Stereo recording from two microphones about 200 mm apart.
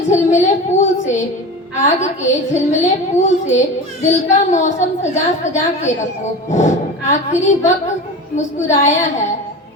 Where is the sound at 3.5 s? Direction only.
35° left (ahead or behind).